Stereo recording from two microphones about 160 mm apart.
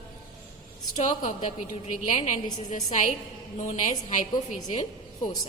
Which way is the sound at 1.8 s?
45° left (ahead or behind).